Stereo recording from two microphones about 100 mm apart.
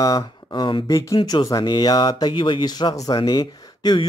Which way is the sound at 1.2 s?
50° left (ahead or behind).